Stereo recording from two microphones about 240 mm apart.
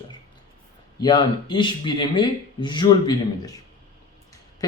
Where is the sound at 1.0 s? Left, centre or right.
Centre.